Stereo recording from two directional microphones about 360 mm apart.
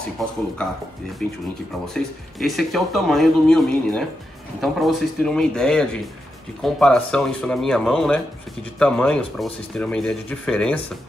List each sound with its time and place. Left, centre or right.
2.0 s speech: centre